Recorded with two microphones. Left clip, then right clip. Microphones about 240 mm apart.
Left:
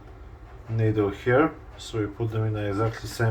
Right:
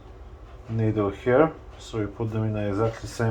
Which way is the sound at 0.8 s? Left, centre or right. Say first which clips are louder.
Left 1 dB; right.